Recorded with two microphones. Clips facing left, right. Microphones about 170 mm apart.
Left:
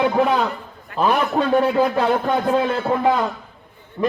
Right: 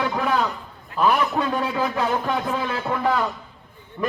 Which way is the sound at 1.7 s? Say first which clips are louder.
Left 6 dB; 30° left (ahead or behind).